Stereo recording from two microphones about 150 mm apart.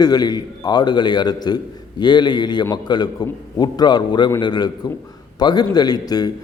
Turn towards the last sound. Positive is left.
turn(degrees=25)  # may be behind; listen again after turning